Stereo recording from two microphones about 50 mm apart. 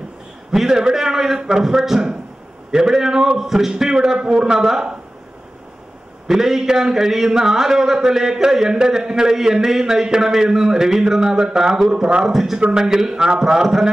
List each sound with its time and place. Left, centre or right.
0.5 s a man's voice: centre
6.2 s a man's voice: centre
12.3 s a man's voice: centre